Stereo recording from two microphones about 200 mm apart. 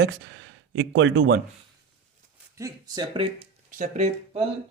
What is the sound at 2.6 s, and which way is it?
Speech, 20° right (ahead or behind).